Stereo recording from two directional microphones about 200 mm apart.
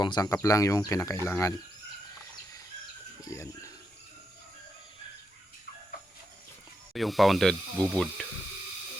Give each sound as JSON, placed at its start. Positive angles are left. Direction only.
{"t": 0.0, "sound": "speech", "side_deg": 20}
{"t": 3.2, "sound": "speech", "side_deg": 15}
{"t": 6.9, "sound": "speech", "side_deg": 0}